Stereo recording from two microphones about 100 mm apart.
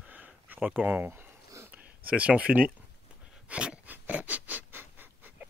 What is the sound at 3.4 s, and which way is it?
Pant, 10° right (ahead or behind).